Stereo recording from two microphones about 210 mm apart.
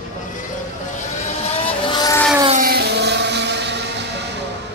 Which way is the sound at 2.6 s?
50° right (ahead or behind).